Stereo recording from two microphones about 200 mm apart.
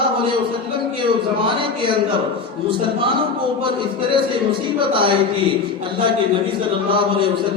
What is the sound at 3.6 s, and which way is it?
A man's voice, 25° right (ahead or behind).